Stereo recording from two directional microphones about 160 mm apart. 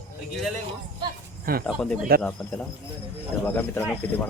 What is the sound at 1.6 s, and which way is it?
Speech, 5° left (ahead or behind).